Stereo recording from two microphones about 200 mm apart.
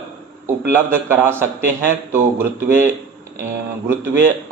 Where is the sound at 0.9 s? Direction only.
10° right (ahead or behind).